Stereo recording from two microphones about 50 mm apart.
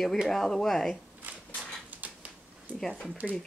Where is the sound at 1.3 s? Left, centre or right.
Right.